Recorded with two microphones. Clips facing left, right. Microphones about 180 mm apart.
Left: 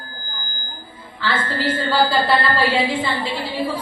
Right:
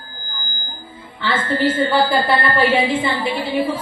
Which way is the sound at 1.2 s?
20° right (ahead or behind).